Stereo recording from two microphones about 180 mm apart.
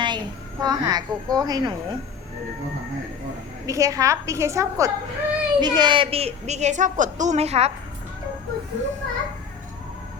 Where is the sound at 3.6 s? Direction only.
20° right (ahead or behind); by 7.7 s 35° right (ahead or behind).